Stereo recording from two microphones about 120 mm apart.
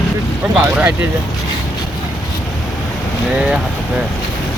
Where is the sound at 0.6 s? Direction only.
15° right (ahead or behind).